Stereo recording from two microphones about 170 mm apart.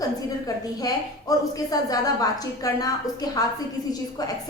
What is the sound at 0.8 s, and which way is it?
A woman's voice, 20° left (ahead or behind).